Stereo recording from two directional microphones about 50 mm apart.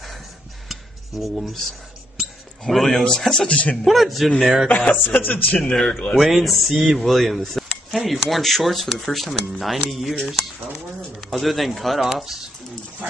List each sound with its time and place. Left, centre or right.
0.7 s a sound: centre
2.6 s a man's voice: centre; by 3.7 s left
3.7 s speech: centre
4.6 s speech: left
5.6 s a man's voice: centre
6.1 s speech: centre
11.1 s speech: centre